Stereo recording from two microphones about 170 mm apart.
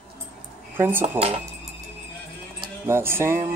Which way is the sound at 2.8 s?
15° right (ahead or behind).